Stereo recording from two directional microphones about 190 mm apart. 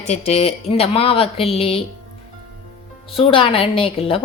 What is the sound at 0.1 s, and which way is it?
Speech, 35° left (ahead or behind).